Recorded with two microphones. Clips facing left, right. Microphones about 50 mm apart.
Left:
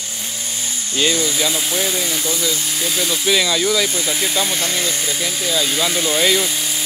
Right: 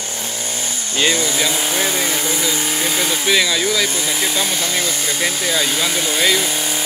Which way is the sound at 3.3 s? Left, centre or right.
Centre.